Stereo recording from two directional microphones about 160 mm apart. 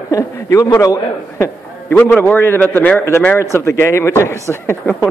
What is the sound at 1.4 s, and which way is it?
A man's voice, 10° left (ahead or behind).